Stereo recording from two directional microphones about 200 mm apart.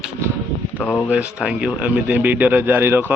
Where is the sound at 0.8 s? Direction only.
5° left (ahead or behind).